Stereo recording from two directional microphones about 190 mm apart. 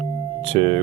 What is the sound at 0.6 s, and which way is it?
Speech, 30° right (ahead or behind).